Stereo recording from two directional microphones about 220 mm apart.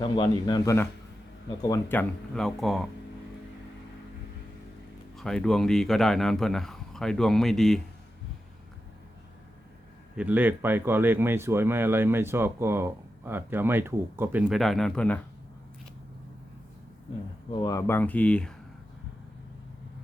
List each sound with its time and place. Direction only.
0.0 s a man's voice: 20° left (ahead or behind); by 2.8 s centre (ahead or behind)
5.1 s speech: centre (ahead or behind)
10.2 s speech: 10° right (ahead or behind)
17.5 s speech: 20° left (ahead or behind)